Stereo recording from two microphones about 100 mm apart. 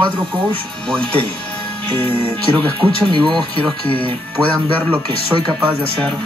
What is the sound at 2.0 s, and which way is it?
Speech, 70° right (ahead or behind).